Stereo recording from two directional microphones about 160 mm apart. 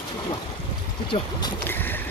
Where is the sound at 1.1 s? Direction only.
25° left (ahead or behind).